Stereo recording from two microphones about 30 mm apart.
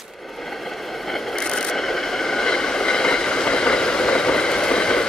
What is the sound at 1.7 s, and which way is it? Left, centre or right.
Train, centre.